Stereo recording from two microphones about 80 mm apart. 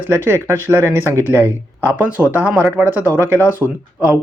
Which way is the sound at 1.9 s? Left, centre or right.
Centre.